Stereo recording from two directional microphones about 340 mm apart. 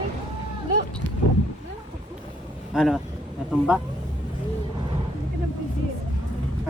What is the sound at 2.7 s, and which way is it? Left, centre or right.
Speech, centre.